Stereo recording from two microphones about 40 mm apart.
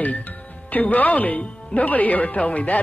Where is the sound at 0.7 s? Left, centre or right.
Left.